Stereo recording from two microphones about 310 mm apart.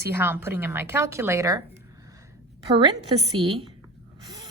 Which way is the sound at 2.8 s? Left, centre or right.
Centre.